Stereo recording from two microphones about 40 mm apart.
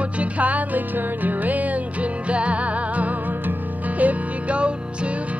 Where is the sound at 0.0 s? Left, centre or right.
Right.